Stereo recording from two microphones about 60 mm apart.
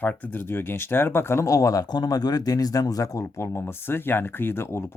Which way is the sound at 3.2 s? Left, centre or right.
Left.